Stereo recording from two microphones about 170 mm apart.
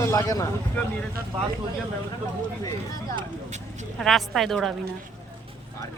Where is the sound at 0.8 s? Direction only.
10° left (ahead or behind).